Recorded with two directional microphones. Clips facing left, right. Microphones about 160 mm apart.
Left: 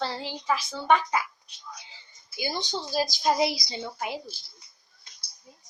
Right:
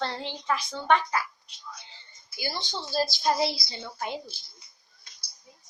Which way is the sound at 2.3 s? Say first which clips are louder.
Left 3 dB; 20° left (ahead or behind).